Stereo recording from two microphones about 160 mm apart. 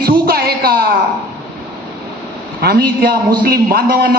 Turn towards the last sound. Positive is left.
turn(degrees=-70)  # may be behind; listen again after turning